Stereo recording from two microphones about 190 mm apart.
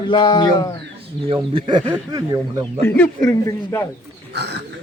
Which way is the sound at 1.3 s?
25° right (ahead or behind).